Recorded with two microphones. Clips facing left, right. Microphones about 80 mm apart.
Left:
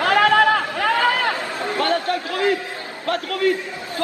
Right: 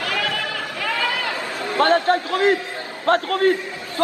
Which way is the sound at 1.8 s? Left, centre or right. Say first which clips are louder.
Right 5 dB; right.